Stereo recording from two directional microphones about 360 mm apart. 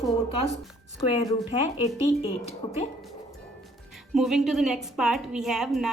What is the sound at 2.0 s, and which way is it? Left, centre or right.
Speech, centre.